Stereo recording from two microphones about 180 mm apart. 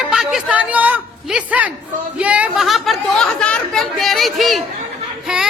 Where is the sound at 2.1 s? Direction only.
5° right (ahead or behind).